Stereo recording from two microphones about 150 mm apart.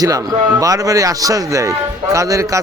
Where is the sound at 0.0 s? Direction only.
25° right (ahead or behind).